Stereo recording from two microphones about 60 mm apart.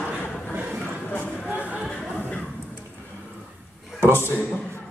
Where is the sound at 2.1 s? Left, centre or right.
Left.